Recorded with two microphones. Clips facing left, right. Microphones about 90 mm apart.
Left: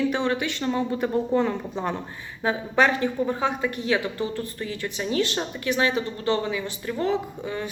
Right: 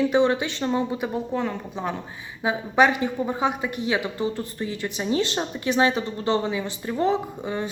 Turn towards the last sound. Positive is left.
turn(degrees=-25)  # may be behind; listen again after turning